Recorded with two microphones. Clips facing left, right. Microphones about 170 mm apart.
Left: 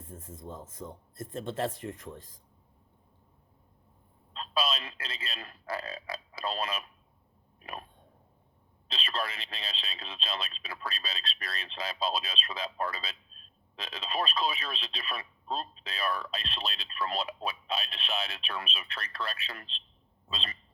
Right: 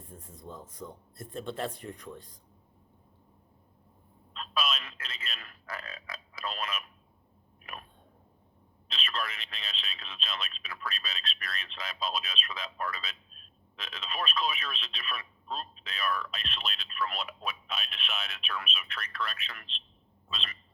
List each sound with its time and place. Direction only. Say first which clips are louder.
0.0 s speech: left 4 dB; 50° left (ahead or behind)
0.3 s speech: left 1 dB; 25° left (ahead or behind)
4.4 s speech: left 2 dB; 30° left (ahead or behind)
7.6 s a sound: left 4 dB; 30° left (ahead or behind)
8.9 s speech: left 2 dB; 30° left (ahead or behind)